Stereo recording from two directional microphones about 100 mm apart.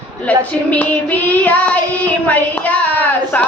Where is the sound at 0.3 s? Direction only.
15° left (ahead or behind).